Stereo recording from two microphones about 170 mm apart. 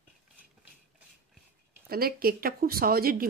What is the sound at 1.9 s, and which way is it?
Speech, 60° right (ahead or behind).